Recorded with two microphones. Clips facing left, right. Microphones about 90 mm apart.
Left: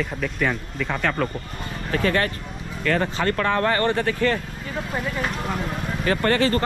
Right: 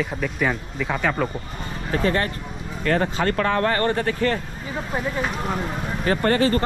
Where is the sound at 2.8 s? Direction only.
40° right (ahead or behind).